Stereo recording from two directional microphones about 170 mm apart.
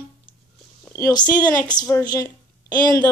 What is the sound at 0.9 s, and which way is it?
A woman's voice, 15° left (ahead or behind).